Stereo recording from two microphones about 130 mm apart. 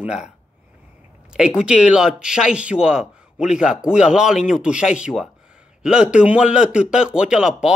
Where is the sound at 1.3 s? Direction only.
5° right (ahead or behind).